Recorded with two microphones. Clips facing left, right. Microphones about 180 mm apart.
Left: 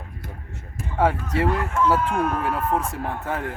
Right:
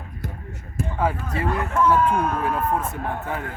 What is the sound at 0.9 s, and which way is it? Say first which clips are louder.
Speech: left 4 dB; 75° left (ahead or behind).